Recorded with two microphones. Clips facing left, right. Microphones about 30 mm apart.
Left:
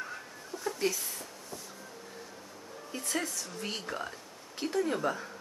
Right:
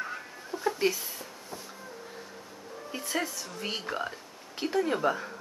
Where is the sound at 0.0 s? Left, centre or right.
Centre.